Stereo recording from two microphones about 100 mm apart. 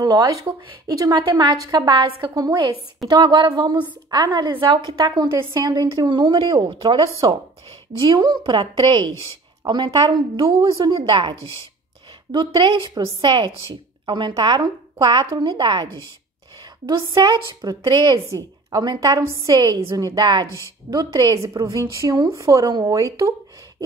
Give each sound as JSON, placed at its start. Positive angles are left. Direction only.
{"t": 0.0, "sound": "a woman's voice", "side_deg": -40}
{"t": 11.0, "sound": "a woman's voice", "side_deg": -60}
{"t": 12.3, "sound": "a woman's voice", "side_deg": -50}
{"t": 17.1, "sound": "a woman's voice", "side_deg": -45}